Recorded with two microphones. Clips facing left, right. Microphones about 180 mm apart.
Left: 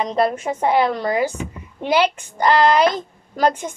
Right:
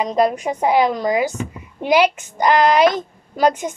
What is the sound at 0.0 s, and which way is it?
A woman's voice, 15° right (ahead or behind).